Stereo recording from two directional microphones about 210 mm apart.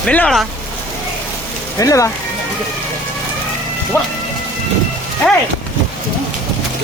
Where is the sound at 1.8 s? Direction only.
15° left (ahead or behind).